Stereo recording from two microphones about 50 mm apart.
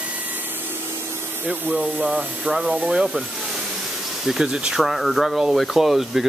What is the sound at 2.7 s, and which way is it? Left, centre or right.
Speech, right.